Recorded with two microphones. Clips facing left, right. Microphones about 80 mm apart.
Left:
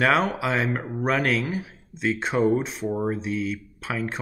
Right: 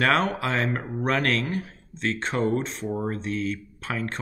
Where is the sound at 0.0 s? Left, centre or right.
Centre.